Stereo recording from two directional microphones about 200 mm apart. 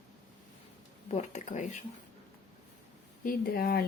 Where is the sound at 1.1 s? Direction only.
35° left (ahead or behind).